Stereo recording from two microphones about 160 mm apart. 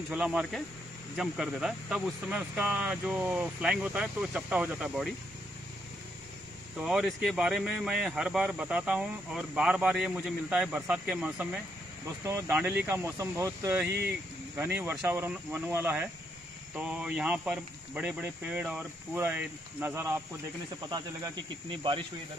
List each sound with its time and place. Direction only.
0.1 s speech: 5° right (ahead or behind)
6.8 s speech: 5° right (ahead or behind)
12.3 s speech: 15° right (ahead or behind)
20.9 s speech: 25° right (ahead or behind)